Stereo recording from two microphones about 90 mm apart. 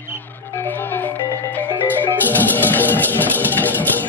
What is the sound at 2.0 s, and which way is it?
Music, 20° left (ahead or behind).